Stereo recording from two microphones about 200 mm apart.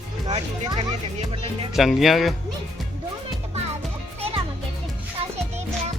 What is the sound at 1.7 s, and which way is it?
Speech, centre (ahead or behind).